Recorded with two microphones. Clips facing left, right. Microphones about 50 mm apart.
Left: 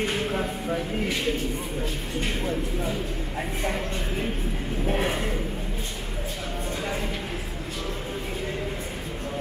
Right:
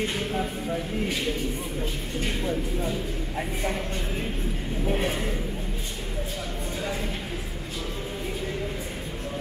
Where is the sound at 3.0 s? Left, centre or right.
Centre.